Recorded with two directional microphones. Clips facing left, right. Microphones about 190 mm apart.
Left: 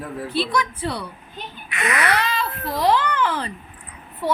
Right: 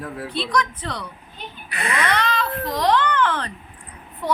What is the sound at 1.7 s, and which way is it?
Speech, 30° right (ahead or behind).